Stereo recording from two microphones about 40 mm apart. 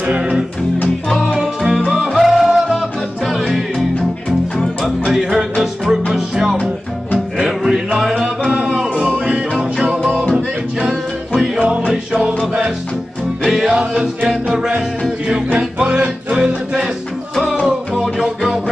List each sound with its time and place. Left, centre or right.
0.0 s music: right
1.0 s music: centre
1.4 s music: centre
5.1 s music: centre
10.3 s music: right
11.9 s music: centre
13.4 s music: centre
13.7 s music: centre
15.9 s music: right
18.1 s music: centre